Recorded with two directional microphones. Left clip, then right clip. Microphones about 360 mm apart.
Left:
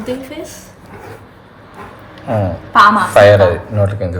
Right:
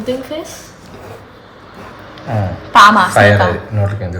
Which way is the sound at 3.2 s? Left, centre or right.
Left.